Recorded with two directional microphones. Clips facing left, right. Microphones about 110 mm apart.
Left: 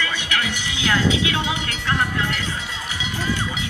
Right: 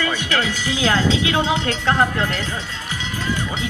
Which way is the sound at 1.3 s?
35° right (ahead or behind).